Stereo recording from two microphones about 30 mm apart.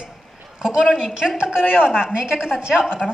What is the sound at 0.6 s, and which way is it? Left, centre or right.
A woman's voice, right.